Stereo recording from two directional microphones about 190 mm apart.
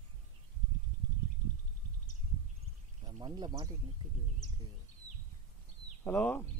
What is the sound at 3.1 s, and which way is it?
Speech, 20° right (ahead or behind).